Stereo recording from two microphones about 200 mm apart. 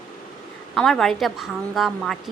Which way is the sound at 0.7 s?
Centre (ahead or behind).